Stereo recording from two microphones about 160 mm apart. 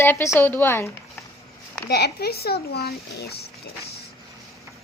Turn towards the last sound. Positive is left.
turn(degrees=80)